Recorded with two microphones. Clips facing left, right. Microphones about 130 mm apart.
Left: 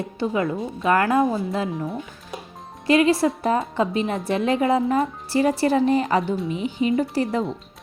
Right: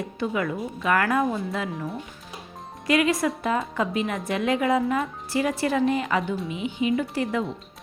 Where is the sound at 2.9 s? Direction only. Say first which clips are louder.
Left 4 dB; 30° left (ahead or behind).